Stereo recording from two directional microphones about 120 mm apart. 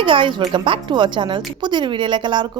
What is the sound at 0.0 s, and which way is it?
Speech, 45° right (ahead or behind).